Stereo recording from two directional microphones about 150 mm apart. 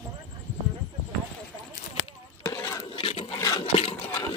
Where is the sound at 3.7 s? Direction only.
40° left (ahead or behind).